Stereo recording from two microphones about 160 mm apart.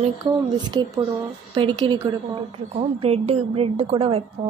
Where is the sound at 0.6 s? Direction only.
30° right (ahead or behind).